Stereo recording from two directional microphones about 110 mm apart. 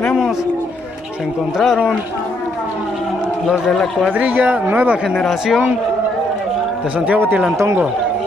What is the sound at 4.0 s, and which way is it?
Speech, 15° right (ahead or behind).